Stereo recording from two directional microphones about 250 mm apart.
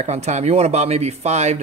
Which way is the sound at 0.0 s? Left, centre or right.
Right.